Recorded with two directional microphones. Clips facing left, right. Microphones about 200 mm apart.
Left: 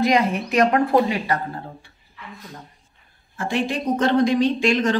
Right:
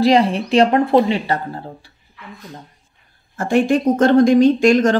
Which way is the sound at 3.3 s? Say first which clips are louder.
Right 8 dB; 45° right (ahead or behind).